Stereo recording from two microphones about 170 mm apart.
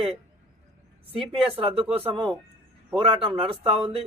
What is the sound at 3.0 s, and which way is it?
Speech, 30° right (ahead or behind).